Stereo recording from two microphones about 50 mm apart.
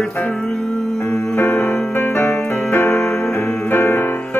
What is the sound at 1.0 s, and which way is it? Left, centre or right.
Music, left.